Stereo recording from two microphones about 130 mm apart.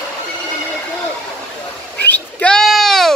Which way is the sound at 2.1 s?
10° left (ahead or behind).